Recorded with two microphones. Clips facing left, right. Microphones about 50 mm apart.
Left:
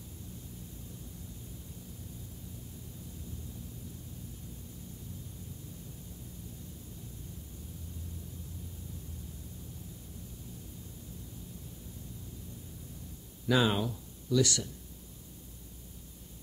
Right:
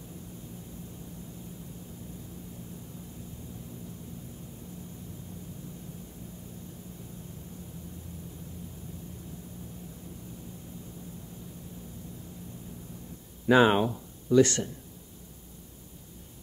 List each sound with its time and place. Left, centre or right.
13.5 s speech: right